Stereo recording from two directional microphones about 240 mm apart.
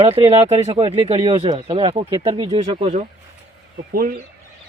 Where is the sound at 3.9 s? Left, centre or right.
Right.